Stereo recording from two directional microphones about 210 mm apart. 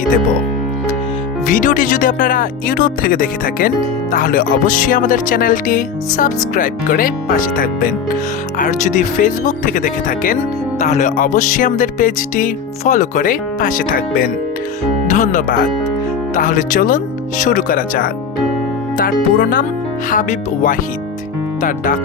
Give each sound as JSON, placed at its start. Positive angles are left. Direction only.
{"t": 1.5, "sound": "speech", "side_deg": 40}